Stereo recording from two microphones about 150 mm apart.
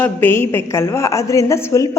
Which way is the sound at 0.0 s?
15° left (ahead or behind).